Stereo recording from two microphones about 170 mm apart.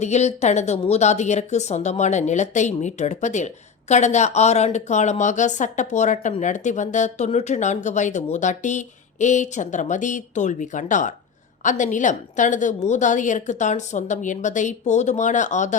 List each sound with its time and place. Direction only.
0.0 s a woman's voice: 40° left (ahead or behind)